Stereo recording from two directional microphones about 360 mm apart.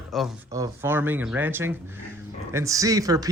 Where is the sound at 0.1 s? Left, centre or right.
Centre.